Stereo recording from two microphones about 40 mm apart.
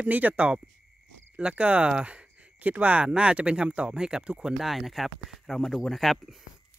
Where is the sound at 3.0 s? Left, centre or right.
Right.